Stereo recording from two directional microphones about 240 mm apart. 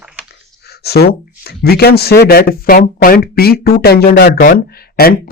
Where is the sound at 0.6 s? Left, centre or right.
Left.